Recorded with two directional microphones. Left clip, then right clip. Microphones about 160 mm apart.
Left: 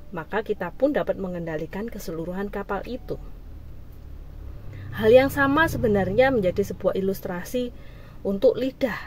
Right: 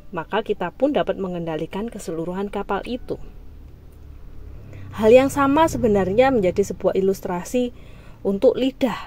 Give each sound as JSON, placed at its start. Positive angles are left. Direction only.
{"t": 0.1, "sound": "speech", "side_deg": -10}
{"t": 4.9, "sound": "speech", "side_deg": -15}